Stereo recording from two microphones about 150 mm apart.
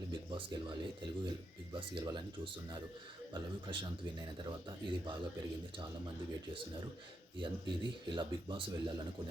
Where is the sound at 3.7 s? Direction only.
30° right (ahead or behind).